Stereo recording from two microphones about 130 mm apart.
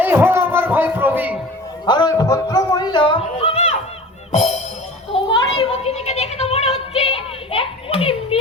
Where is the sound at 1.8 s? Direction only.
35° left (ahead or behind).